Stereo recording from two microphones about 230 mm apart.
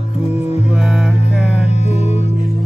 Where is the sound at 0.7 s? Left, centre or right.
Centre.